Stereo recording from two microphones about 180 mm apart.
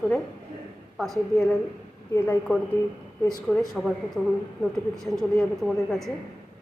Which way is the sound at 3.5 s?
5° left (ahead or behind).